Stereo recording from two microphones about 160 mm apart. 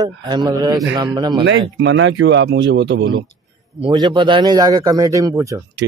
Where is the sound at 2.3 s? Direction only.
90° right.